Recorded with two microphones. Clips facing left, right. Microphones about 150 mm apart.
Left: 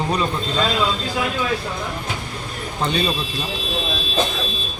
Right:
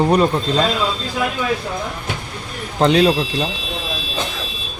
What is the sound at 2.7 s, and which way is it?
Speech, 85° right.